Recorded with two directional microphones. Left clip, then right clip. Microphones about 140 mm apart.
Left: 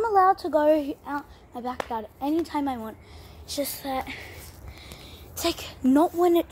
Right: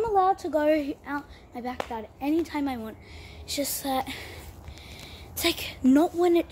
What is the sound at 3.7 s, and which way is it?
Speech, 20° right (ahead or behind).